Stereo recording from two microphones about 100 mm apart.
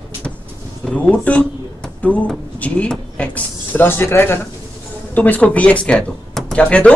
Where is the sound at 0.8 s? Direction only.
10° left (ahead or behind).